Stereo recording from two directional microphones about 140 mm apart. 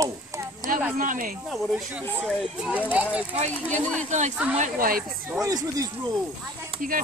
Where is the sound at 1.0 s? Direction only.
75° right (ahead or behind).